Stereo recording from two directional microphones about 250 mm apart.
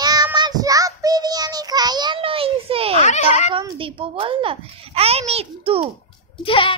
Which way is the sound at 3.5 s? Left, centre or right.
Centre.